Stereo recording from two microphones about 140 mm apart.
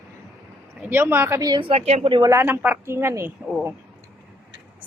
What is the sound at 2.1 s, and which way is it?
Speech, 35° right (ahead or behind).